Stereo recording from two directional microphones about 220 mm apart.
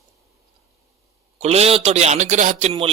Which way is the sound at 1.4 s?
30° right (ahead or behind).